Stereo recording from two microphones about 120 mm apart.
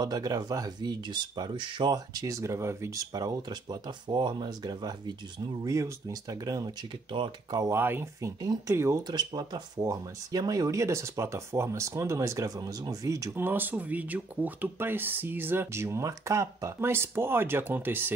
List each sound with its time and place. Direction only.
0.0 s speech: 30° right (ahead or behind)
7.1 s speech: 45° right (ahead or behind)
7.6 s speech: 20° right (ahead or behind)
8.4 s speech: 35° right (ahead or behind)
9.0 s speech: 35° right (ahead or behind); by 18.1 s 15° right (ahead or behind)